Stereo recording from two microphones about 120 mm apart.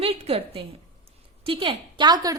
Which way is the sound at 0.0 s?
55° right (ahead or behind).